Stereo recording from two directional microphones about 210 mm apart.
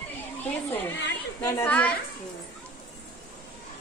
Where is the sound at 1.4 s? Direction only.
10° left (ahead or behind).